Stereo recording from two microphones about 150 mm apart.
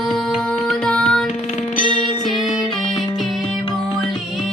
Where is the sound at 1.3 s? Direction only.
50° left (ahead or behind).